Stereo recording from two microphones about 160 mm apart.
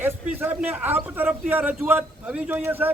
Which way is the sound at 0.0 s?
10° right (ahead or behind).